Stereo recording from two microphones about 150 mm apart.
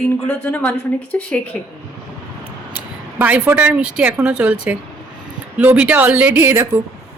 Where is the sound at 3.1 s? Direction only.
10° right (ahead or behind).